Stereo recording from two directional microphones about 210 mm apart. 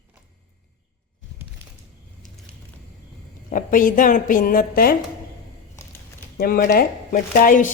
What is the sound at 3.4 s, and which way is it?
A woman's voice, 40° left (ahead or behind).